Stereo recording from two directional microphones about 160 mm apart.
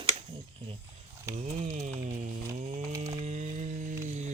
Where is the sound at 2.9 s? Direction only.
20° right (ahead or behind).